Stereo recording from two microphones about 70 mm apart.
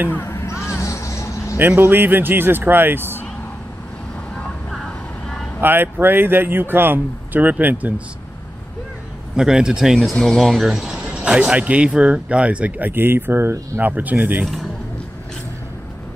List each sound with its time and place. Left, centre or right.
0.2 s a sound: left
1.8 s speech: right
5.6 s speech: right
9.3 s speech: centre; by 13.8 s right
13.8 s speech: right
14.4 s a man's voice: centre